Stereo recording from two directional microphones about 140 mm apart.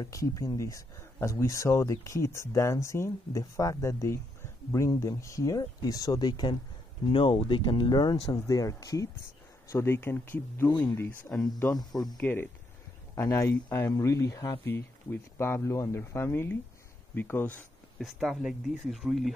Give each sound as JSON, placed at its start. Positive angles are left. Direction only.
{"t": 0.0, "sound": "speech", "side_deg": 25}
{"t": 17.9, "sound": "speech", "side_deg": 0}